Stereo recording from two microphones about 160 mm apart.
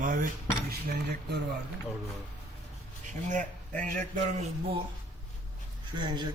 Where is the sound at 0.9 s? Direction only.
90° right.